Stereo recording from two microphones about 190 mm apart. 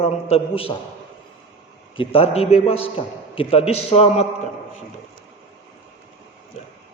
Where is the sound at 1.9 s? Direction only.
30° left (ahead or behind).